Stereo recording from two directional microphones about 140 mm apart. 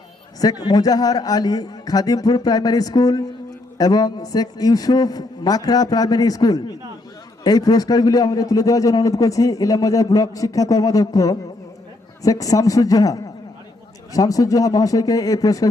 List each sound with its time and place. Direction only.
0.4 s a man's voice: 30° left (ahead or behind)